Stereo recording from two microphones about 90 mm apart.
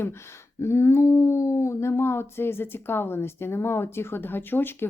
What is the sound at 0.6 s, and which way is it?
Speech, 30° left (ahead or behind).